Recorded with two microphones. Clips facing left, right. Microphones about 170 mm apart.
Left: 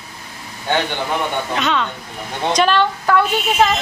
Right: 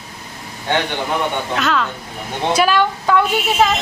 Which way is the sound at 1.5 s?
Centre (ahead or behind).